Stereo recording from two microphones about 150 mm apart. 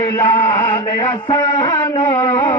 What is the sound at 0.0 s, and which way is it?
Mantra, 20° left (ahead or behind).